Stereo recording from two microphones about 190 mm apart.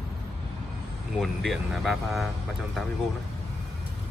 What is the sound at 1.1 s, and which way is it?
Speech, centre (ahead or behind).